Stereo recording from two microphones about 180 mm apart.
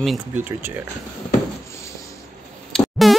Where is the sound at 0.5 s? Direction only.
10° right (ahead or behind).